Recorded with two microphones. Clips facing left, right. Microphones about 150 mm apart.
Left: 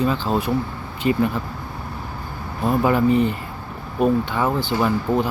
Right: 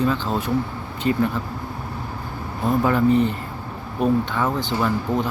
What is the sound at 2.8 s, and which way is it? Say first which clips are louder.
Speech: even; 10° left (ahead or behind).